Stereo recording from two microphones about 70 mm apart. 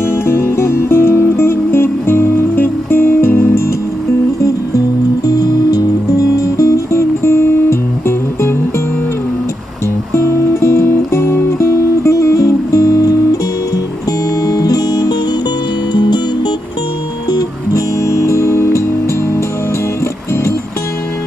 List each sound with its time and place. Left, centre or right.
0.0 s music: left
4.4 s music: left
6.3 s music: left
10.1 s music: left
14.4 s music: left
15.9 s music: left
17.3 s music: left
18.0 s music: left